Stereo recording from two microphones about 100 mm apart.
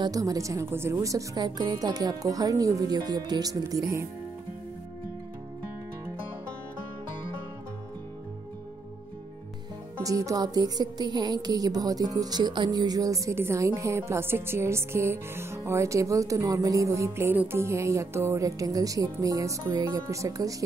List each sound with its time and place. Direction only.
0.0 s music: 35° right (ahead or behind)
10.0 s music: 35° right (ahead or behind)